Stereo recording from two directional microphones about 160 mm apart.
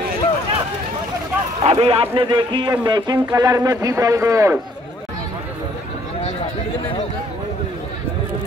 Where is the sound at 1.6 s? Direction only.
35° right (ahead or behind); by 4.5 s 20° right (ahead or behind).